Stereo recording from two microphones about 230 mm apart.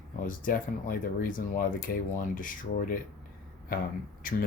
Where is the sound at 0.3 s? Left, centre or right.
Left.